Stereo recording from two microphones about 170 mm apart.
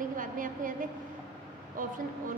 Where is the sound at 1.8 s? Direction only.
55° right (ahead or behind).